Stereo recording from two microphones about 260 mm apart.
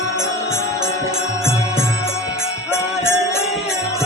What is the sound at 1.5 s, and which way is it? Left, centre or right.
Music, centre.